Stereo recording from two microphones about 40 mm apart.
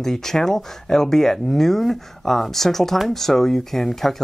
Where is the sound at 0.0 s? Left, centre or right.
Centre.